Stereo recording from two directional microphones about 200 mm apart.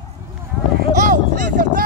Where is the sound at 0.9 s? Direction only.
40° right (ahead or behind).